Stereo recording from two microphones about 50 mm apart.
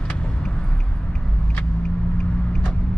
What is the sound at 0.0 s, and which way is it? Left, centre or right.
Vehicle, left.